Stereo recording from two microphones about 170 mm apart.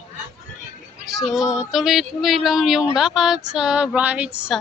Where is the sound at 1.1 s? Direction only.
Centre (ahead or behind).